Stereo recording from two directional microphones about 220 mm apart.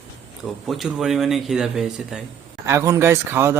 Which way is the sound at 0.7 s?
Centre (ahead or behind).